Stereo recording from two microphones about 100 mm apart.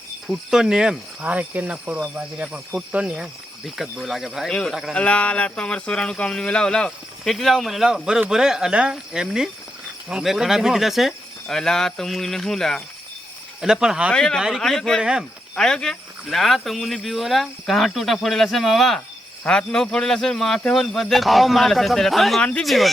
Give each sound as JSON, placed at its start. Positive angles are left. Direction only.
{"t": 0.3, "sound": "cricket", "side_deg": -5}
{"t": 2.1, "sound": "speech", "side_deg": -15}
{"t": 4.9, "sound": "speech", "side_deg": 10}
{"t": 8.3, "sound": "cricket", "side_deg": -5}
{"t": 10.1, "sound": "speech", "side_deg": -5}
{"t": 13.6, "sound": "cricket", "side_deg": -5}
{"t": 14.1, "sound": "speech", "side_deg": 5}